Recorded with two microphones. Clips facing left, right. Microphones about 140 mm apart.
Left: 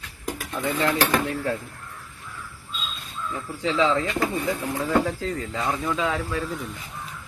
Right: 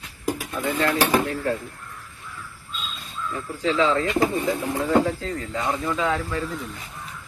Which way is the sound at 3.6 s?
20° left (ahead or behind).